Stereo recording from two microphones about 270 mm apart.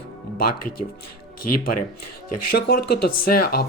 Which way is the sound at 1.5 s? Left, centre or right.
Left.